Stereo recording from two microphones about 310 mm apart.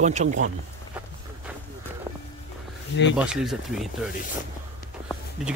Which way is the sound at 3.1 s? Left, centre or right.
Centre.